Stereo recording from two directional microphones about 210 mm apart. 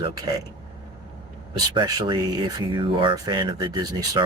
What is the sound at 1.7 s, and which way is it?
Speech, 20° right (ahead or behind).